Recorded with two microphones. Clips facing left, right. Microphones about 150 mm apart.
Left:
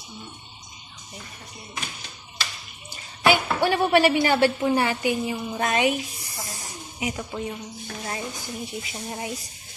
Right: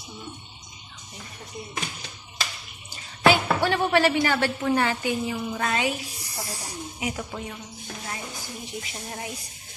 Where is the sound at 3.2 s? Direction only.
10° left (ahead or behind).